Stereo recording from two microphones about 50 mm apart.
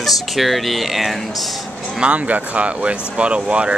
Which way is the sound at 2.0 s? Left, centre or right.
Right.